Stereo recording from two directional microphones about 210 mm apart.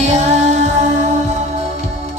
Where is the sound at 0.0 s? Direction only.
30° right (ahead or behind).